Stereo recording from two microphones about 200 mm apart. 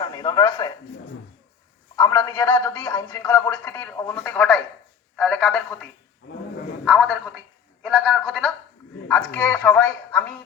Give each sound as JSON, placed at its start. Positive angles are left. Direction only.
{"t": 0.0, "sound": "a man's voice", "side_deg": 20}
{"t": 2.0, "sound": "a man's voice", "side_deg": 15}